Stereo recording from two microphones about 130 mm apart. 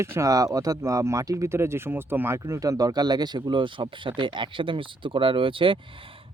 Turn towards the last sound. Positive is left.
turn(degrees=-40)  # may be behind; listen again after turning